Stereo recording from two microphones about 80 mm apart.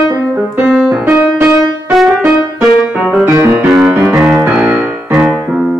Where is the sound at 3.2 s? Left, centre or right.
Right.